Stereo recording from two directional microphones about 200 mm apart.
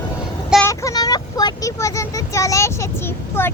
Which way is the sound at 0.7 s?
15° left (ahead or behind).